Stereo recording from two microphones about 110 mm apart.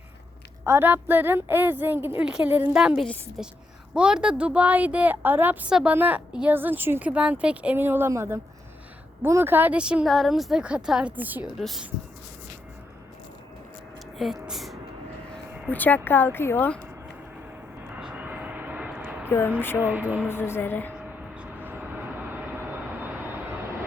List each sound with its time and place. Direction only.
0.6 s a woman's voice: 20° right (ahead or behind)
14.2 s speech: centre (ahead or behind)
15.7 s speech: 15° left (ahead or behind)
17.9 s vehicle: 15° right (ahead or behind)
19.3 s speech: 20° left (ahead or behind)
19.8 s a woman's voice: 15° right (ahead or behind)
20.1 s speech: 20° left (ahead or behind)
21.0 s vehicle: 10° right (ahead or behind)